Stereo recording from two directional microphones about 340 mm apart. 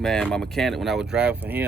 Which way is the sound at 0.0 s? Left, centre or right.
Centre.